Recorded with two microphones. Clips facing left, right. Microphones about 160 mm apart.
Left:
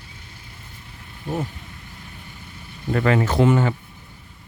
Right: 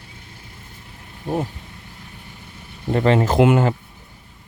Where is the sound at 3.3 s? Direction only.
55° right (ahead or behind).